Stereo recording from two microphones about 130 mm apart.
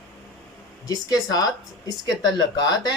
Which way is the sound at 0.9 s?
30° left (ahead or behind).